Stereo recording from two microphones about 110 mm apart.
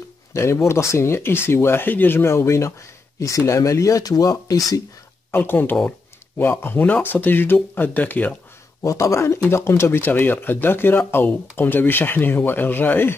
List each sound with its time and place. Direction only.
0.3 s speech: 25° left (ahead or behind)
5.3 s speech: 20° left (ahead or behind)
8.8 s speech: 25° left (ahead or behind)